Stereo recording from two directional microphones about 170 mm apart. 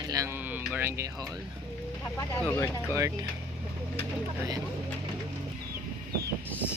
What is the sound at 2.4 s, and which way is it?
Speech, 15° left (ahead or behind).